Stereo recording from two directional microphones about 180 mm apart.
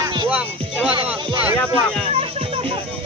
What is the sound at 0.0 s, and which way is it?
Music, 25° right (ahead or behind).